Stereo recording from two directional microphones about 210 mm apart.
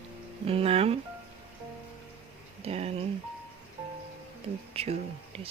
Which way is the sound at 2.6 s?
30° right (ahead or behind).